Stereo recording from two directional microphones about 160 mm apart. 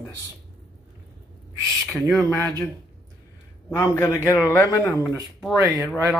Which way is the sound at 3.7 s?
20° left (ahead or behind).